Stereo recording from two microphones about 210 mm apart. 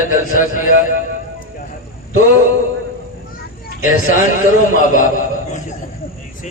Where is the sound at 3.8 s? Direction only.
40° left (ahead or behind).